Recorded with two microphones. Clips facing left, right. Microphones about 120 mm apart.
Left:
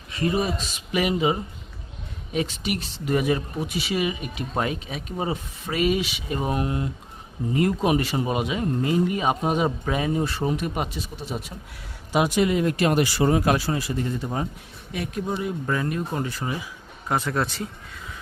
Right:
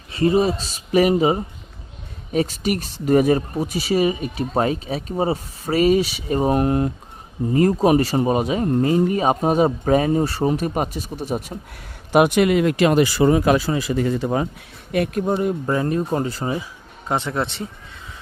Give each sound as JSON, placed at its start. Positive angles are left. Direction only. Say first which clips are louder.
{"t": 0.1, "sound": "speech", "louder": "right 7 dB", "side_deg": -30}
{"t": 7.5, "sound": "speech", "louder": "right 6 dB", "side_deg": -40}
{"t": 12.1, "sound": "speech", "louder": "right 6 dB", "side_deg": -60}
{"t": 14.9, "sound": "speech", "louder": "right 10 dB", "side_deg": -60}
{"t": 15.3, "sound": "speech", "louder": "right 6 dB", "side_deg": -45}
{"t": 15.6, "sound": "speech", "louder": "right 5 dB", "side_deg": -30}